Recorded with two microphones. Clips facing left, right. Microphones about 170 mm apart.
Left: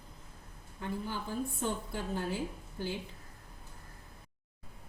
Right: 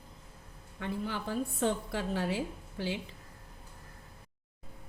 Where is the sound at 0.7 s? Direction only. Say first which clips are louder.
Right 2 dB; 80° right.